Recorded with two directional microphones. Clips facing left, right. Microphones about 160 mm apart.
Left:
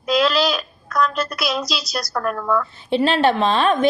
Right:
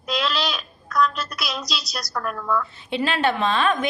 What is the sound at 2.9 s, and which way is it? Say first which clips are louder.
Speech: left 6 dB; 30° left (ahead or behind).